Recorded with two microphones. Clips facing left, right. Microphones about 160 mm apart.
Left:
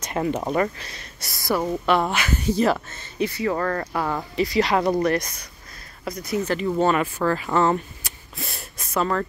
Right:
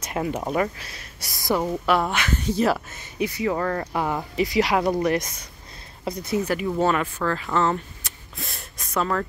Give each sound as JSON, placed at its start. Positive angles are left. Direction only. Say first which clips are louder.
{"t": 0.0, "sound": "speech", "louder": "left 2 dB", "side_deg": -5}
{"t": 1.3, "sound": "speech", "louder": "even", "side_deg": -15}
{"t": 1.7, "sound": "speech", "louder": "left 1 dB", "side_deg": 0}
{"t": 2.9, "sound": "speech", "louder": "left 1 dB", "side_deg": -15}
{"t": 6.4, "sound": "speech", "louder": "left 3 dB", "side_deg": -10}
{"t": 6.9, "sound": "speech", "louder": "left 2 dB", "side_deg": 10}
{"t": 8.4, "sound": "a sound", "louder": "left 2 dB", "side_deg": 5}